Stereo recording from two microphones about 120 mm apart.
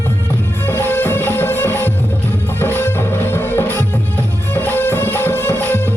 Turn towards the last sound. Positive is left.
turn(degrees=15)  # may be behind; listen again after turning